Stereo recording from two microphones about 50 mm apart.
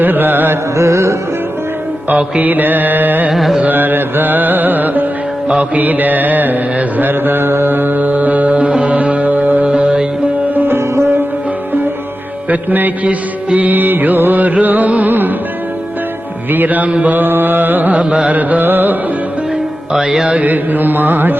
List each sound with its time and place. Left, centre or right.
0.0 s music: right
0.8 s music: right
2.4 s music: right
3.3 s carnatic music: centre
3.6 s music: right
10.5 s music: right
12.5 s music: right
16.5 s music: right
19.9 s music: centre
20.3 s music: right